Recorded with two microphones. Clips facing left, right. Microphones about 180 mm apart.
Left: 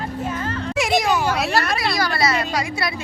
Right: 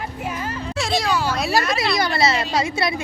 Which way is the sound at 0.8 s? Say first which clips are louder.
Left 2 dB; 15° left (ahead or behind).